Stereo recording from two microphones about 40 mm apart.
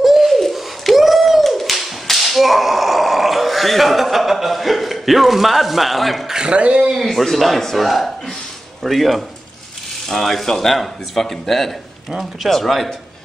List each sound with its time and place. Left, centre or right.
0.0 s pigeon: centre
6.2 s speech: centre
6.5 s speech: right
6.9 s speech: centre